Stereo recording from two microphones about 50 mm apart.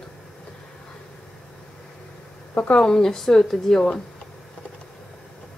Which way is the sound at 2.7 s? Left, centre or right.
Centre.